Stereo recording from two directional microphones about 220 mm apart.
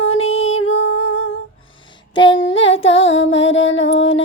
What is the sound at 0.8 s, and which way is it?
Music, 80° left.